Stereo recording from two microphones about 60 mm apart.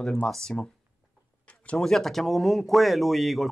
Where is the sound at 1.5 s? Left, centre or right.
Left.